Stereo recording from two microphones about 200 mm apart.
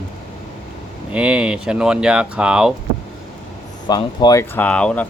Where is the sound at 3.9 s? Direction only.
20° left (ahead or behind).